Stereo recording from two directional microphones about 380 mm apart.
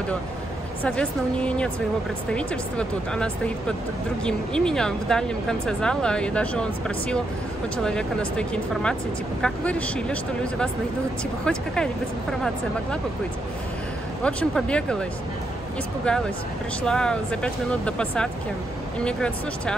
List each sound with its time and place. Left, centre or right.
0.8 s speech: centre
14.2 s speech: centre
16.1 s speech: centre